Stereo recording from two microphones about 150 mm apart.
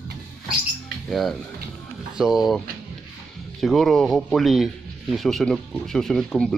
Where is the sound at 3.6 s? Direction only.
Centre (ahead or behind).